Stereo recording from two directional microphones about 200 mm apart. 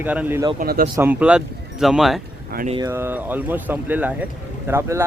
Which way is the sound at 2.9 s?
10° right (ahead or behind).